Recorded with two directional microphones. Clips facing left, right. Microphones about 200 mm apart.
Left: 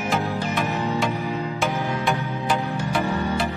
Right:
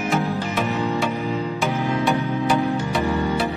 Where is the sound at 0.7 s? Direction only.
15° right (ahead or behind).